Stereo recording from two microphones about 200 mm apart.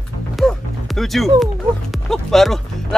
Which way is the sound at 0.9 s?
Centre (ahead or behind).